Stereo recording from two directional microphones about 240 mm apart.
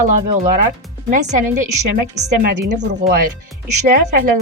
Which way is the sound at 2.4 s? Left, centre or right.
Right.